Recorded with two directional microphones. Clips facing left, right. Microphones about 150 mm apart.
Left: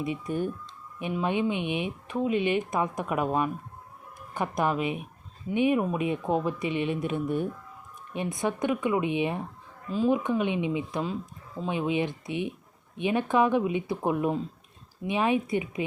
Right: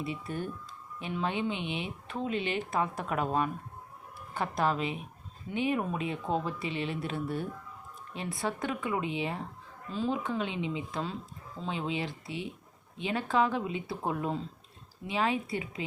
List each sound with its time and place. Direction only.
0.0 s speech: 15° left (ahead or behind)